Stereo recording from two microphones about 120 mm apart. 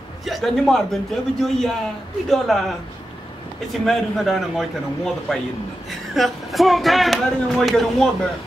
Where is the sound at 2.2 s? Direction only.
Centre (ahead or behind).